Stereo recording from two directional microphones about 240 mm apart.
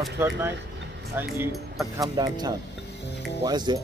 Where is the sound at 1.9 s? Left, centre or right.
Centre.